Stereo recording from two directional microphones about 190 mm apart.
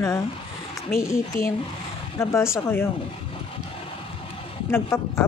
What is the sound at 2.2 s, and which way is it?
Speech, 15° left (ahead or behind).